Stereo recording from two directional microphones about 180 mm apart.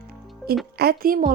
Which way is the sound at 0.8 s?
55° right (ahead or behind).